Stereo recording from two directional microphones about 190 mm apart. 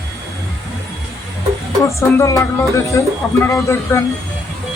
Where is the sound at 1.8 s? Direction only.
15° left (ahead or behind).